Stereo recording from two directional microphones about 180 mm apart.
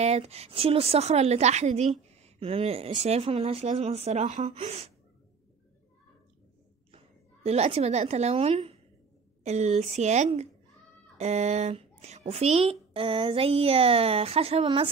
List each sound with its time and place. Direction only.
0.0 s a woman's voice: 35° right (ahead or behind)
7.4 s a woman's voice: 35° right (ahead or behind)